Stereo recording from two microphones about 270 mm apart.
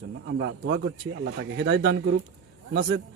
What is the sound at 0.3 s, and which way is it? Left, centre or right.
A man's voice, right.